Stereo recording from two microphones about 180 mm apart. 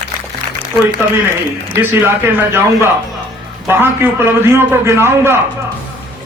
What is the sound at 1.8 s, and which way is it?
A man's voice, 10° right (ahead or behind).